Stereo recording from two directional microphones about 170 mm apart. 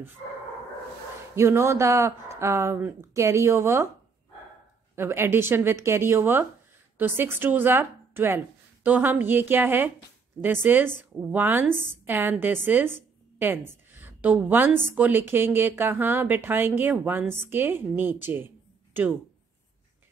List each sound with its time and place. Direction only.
1.3 s a woman's voice: 15° right (ahead or behind)
4.9 s a woman's voice: 15° right (ahead or behind)
13.9 s a sound: 10° right (ahead or behind)
14.9 s a woman's voice: 10° right (ahead or behind)